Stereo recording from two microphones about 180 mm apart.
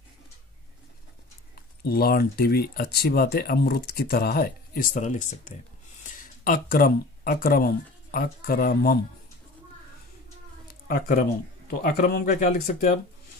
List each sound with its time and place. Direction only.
1.5 s speech: 60° left (ahead or behind)
10.7 s a sound: 55° left (ahead or behind)
11.8 s speech: 60° left (ahead or behind)
12.4 s speech: 45° left (ahead or behind)